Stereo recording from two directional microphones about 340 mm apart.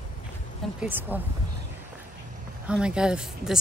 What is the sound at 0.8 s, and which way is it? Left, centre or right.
Speech, centre.